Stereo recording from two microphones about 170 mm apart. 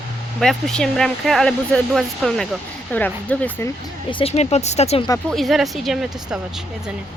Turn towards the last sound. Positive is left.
turn(degrees=0)  # may be behind; listen again after turning